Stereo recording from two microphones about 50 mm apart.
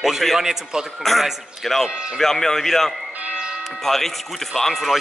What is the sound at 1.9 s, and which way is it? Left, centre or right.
Speech, centre.